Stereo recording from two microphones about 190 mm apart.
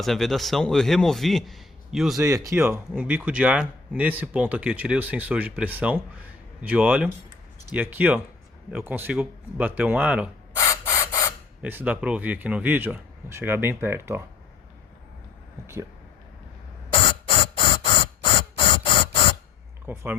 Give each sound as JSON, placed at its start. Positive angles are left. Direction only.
{"t": 0.0, "sound": "a man's voice", "side_deg": 0}
{"t": 2.1, "sound": "speech", "side_deg": -15}
{"t": 10.6, "sound": "mechanisms", "side_deg": 15}
{"t": 11.6, "sound": "speech", "side_deg": -10}
{"t": 15.6, "sound": "speech", "side_deg": -15}
{"t": 17.6, "sound": "a sound", "side_deg": 25}
{"t": 19.9, "sound": "speech", "side_deg": -10}